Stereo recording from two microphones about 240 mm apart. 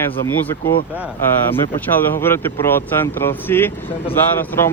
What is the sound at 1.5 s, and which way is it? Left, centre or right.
Speech, centre.